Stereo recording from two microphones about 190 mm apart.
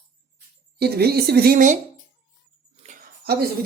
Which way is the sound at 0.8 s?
55° right (ahead or behind).